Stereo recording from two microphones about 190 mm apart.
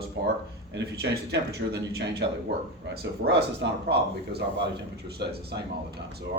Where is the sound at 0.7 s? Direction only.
60° right (ahead or behind).